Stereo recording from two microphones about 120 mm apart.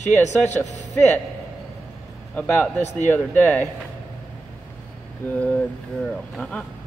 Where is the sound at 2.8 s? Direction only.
75° left (ahead or behind).